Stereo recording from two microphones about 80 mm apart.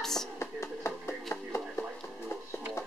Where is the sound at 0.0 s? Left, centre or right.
Centre.